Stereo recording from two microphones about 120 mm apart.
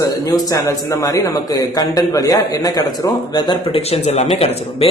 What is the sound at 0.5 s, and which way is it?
A man's voice, 30° left (ahead or behind).